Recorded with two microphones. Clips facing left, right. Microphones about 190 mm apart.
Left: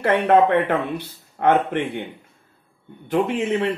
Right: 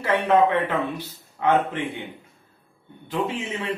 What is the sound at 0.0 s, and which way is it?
Speech, 60° left (ahead or behind).